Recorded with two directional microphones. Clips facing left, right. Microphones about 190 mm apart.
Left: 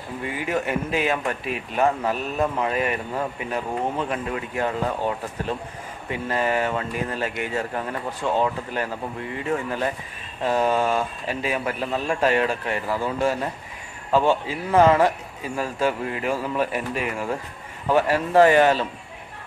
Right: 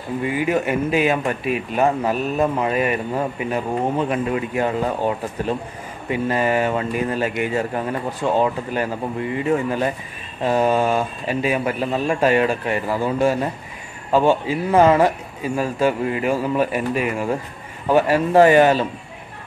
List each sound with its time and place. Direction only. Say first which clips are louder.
0.2 s speech: right 5 dB; 10° right (ahead or behind)